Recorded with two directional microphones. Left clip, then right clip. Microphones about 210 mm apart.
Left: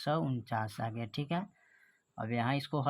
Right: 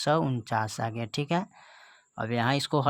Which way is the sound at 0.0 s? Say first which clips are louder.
Right 8 dB; 35° right (ahead or behind).